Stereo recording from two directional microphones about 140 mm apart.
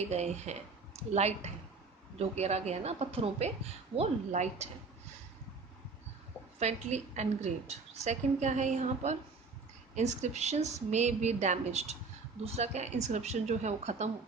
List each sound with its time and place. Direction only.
0.0 s a woman's voice: 50° right (ahead or behind)
6.6 s a woman's voice: 55° right (ahead or behind)